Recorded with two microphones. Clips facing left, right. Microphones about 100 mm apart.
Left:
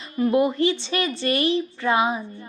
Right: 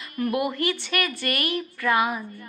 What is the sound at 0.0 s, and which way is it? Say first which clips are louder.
A woman's voice: left 5 dB; 25° left (ahead or behind).